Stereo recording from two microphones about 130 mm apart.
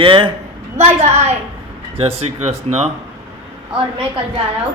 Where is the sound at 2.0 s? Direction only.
50° right (ahead or behind).